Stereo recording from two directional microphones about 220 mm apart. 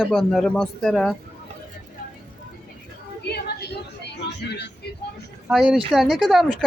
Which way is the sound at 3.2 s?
45° left (ahead or behind).